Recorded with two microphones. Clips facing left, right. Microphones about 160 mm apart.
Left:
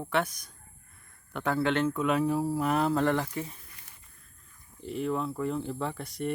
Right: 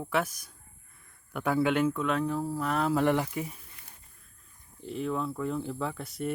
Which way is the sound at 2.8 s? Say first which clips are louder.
Even; 10° right (ahead or behind).